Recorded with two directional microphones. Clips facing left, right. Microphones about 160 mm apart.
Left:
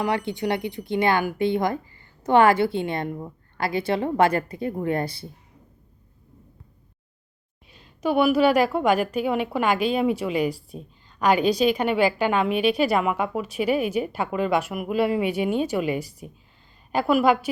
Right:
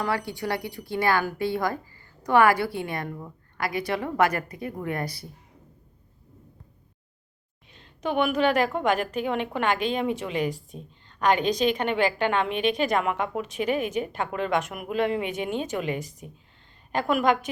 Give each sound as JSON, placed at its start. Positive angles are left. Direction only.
{"t": 0.0, "sound": "speech", "side_deg": 20}
{"t": 7.7, "sound": "a woman's voice", "side_deg": 10}